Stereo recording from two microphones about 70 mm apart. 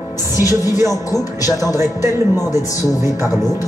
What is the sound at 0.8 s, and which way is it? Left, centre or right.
Music, left.